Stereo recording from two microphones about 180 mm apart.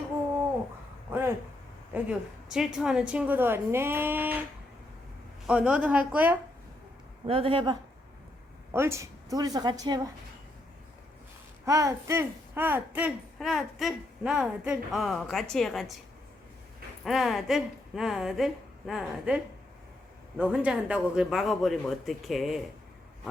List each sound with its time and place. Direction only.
1.1 s a sound: 15° right (ahead or behind)
1.9 s a woman's voice: 5° right (ahead or behind)
5.5 s a woman's voice: 5° right (ahead or behind)
7.3 s a woman's voice: 30° right (ahead or behind)
8.7 s a woman's voice: 15° right (ahead or behind)
11.6 s speech: 15° right (ahead or behind); by 16.0 s centre (ahead or behind)
17.0 s speech: centre (ahead or behind)
20.4 s speech: 5° right (ahead or behind)